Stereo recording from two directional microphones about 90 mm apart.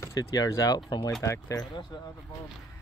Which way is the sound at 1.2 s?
35° left (ahead or behind).